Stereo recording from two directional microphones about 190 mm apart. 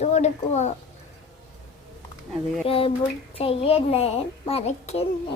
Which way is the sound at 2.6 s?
30° left (ahead or behind).